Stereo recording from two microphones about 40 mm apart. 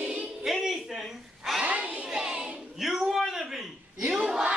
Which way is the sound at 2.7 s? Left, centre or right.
Centre.